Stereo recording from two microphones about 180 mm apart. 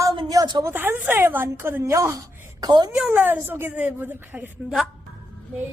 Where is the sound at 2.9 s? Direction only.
5° right (ahead or behind).